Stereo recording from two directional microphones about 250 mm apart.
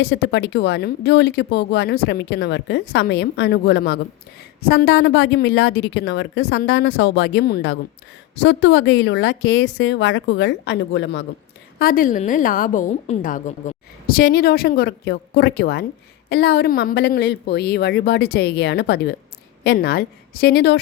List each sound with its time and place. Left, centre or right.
0.0 s speech: left
11.8 s a woman's voice: left